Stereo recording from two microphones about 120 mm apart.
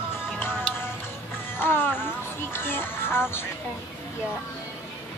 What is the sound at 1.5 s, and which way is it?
Speech, 20° left (ahead or behind).